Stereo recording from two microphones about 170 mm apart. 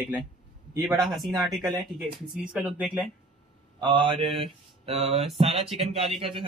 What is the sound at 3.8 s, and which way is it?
Speech, 30° right (ahead or behind).